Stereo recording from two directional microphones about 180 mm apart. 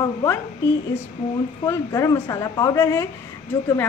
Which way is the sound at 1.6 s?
15° left (ahead or behind).